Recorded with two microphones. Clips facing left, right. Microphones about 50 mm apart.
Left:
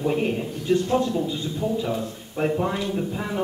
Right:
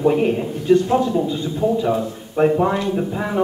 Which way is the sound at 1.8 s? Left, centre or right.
Centre.